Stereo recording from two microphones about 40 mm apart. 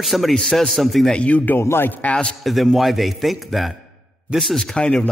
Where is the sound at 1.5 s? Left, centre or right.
Left.